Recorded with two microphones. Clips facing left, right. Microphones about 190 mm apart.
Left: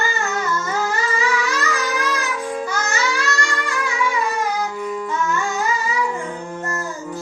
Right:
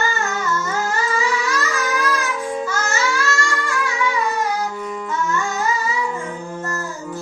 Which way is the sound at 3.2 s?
20° left (ahead or behind).